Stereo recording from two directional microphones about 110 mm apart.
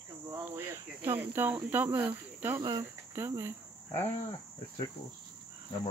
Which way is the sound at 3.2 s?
25° right (ahead or behind).